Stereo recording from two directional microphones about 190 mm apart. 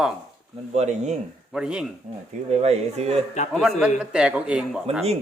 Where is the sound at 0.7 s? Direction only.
35° right (ahead or behind).